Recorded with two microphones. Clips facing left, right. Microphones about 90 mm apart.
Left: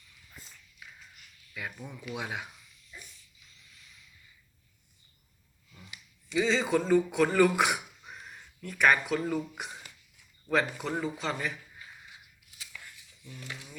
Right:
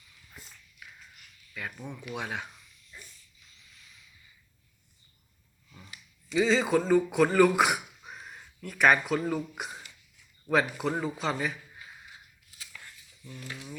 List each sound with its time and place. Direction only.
1.8 s speech: 20° right (ahead or behind)
2.1 s speech: 5° left (ahead or behind)
5.7 s a sound: 30° right (ahead or behind)
6.2 s speech: centre (ahead or behind)